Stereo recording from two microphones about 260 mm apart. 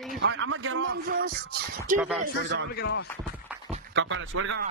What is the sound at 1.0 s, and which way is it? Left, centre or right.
Music, right.